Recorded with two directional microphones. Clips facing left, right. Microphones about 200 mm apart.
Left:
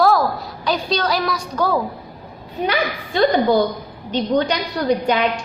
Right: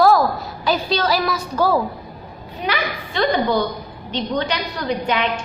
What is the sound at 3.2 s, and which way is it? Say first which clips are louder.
Speech: left 3 dB; 35° left (ahead or behind).